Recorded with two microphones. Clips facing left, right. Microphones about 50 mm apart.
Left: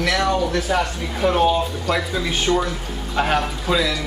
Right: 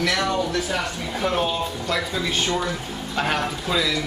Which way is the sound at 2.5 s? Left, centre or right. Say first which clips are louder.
Left 4 dB; centre.